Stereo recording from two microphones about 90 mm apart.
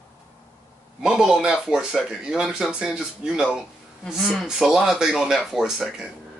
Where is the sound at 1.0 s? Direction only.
5° right (ahead or behind).